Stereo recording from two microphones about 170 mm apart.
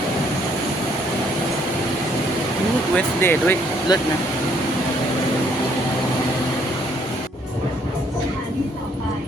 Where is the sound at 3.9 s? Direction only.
25° left (ahead or behind).